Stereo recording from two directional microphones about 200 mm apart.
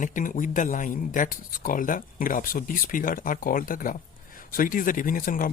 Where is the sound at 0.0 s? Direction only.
40° left (ahead or behind).